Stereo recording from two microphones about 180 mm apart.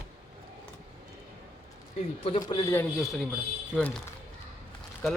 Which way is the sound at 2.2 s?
30° left (ahead or behind).